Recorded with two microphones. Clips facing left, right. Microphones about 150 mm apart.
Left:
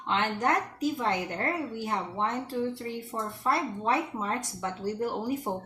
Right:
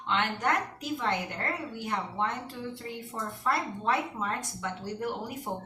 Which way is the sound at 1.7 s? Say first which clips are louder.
Left 1 dB; 35° left (ahead or behind).